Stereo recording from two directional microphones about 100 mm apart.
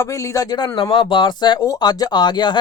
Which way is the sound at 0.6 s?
50° left (ahead or behind).